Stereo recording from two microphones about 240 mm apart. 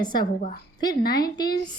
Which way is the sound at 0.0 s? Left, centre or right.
Centre.